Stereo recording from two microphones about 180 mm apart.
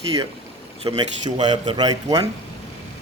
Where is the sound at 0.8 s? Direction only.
25° right (ahead or behind).